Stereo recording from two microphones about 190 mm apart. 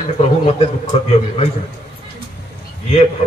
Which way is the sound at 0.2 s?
35° left (ahead or behind).